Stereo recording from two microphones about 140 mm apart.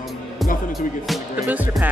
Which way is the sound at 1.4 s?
10° right (ahead or behind).